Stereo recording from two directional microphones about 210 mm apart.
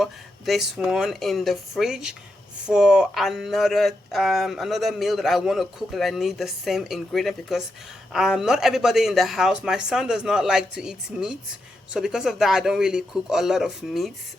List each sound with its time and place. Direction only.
0.0 s speech: centre (ahead or behind)